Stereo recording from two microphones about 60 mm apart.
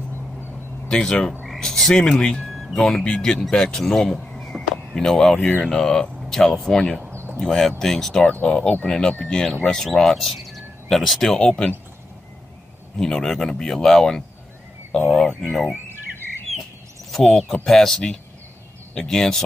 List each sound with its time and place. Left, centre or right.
0.8 s speech: centre
1.4 s frog: centre
2.4 s a sound: centre
2.8 s speech: centre
7.1 s a sound: right
7.3 s speech: centre
8.3 s speech: centre
12.9 s speech: centre
15.4 s speech: centre
17.1 s speech: centre